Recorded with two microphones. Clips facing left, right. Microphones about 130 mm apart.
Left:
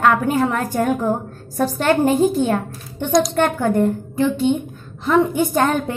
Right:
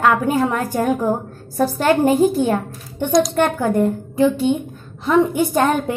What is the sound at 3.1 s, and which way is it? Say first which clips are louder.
Speech: right 1 dB; centre (ahead or behind).